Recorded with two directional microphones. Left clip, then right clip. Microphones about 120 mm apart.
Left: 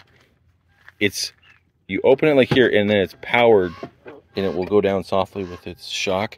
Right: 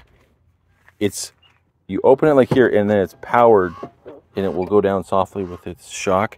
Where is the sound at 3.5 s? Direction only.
90° right.